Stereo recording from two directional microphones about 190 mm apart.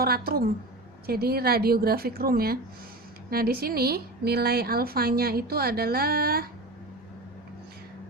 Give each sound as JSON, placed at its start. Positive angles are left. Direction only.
{"t": 0.0, "sound": "speech", "side_deg": -55}